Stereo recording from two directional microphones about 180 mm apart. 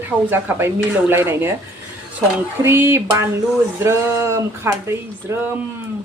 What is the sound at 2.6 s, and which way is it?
Speech, 15° right (ahead or behind).